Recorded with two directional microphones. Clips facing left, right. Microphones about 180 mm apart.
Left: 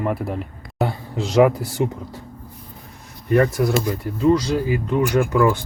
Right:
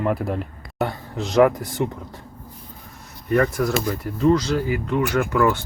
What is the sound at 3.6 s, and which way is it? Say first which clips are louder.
Speech: left 2 dB; 10° left (ahead or behind).